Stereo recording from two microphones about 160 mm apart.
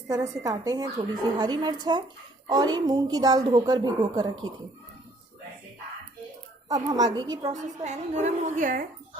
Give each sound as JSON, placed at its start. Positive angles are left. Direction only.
{"t": 0.1, "sound": "a woman's voice", "side_deg": -25}
{"t": 6.7, "sound": "a woman's voice", "side_deg": -25}
{"t": 7.5, "sound": "a woman's voice", "side_deg": -50}